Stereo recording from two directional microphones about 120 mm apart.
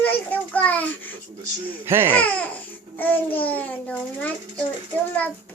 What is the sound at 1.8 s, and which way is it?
Speech, 20° right (ahead or behind).